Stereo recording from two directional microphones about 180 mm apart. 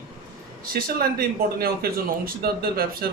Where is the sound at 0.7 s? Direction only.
55° right (ahead or behind).